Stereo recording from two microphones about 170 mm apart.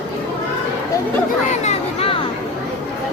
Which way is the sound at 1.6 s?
35° left (ahead or behind).